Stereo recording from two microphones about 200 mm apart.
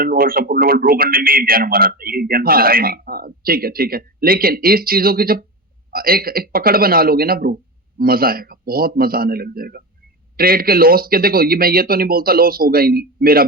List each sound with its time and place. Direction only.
0.0 s speech: 45° right (ahead or behind)